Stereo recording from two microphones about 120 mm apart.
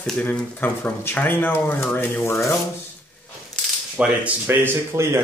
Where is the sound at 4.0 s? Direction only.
15° right (ahead or behind).